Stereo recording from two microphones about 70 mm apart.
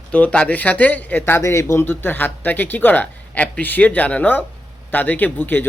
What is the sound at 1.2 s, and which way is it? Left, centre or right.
Speech, left.